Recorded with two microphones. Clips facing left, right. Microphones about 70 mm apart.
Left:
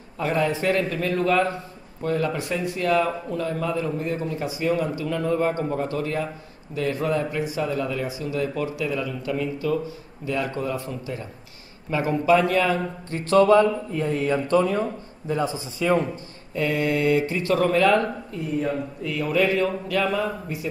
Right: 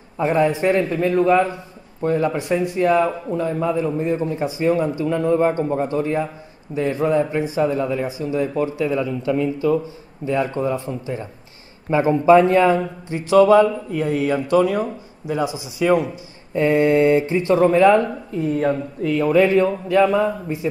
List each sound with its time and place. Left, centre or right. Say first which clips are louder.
0.2 s a man's voice: right 5 dB; right
16.5 s a man's voice: right 8 dB; right
18.6 s a man's voice: right 6 dB; right